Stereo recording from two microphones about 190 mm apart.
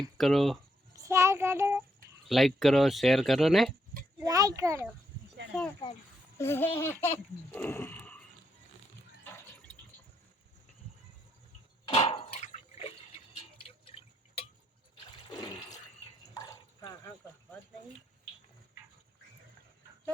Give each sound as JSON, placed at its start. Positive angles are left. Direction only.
{"t": 0.2, "sound": "speech", "side_deg": 0}
{"t": 0.9, "sound": "child singing", "side_deg": -15}
{"t": 2.2, "sound": "speech", "side_deg": 0}
{"t": 4.2, "sound": "a child's voice", "side_deg": -20}
{"t": 6.4, "sound": "speech", "side_deg": 10}
{"t": 7.5, "sound": "a sound", "side_deg": 10}
{"t": 11.9, "sound": "a sound", "side_deg": 30}
{"t": 15.1, "sound": "toilet flush", "side_deg": 20}
{"t": 16.3, "sound": "a sound", "side_deg": 20}